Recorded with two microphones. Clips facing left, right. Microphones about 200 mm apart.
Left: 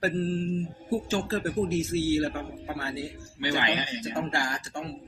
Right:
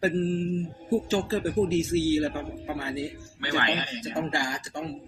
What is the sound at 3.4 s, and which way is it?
Speech, 15° left (ahead or behind).